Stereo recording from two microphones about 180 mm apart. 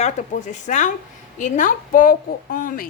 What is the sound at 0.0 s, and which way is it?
A woman's voice, 40° left (ahead or behind).